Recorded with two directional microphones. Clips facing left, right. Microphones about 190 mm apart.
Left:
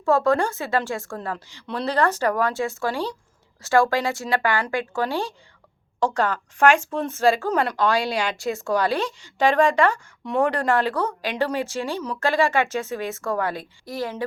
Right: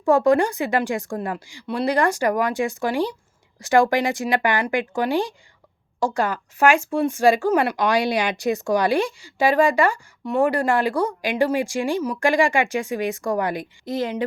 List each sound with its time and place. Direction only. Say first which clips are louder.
0.0 s speech: right 3 dB; 15° right (ahead or behind)